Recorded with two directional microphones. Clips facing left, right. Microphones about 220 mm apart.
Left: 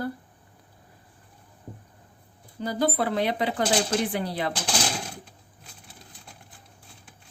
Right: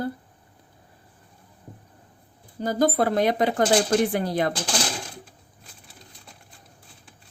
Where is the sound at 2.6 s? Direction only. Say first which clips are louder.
Right 4 dB; 45° right (ahead or behind).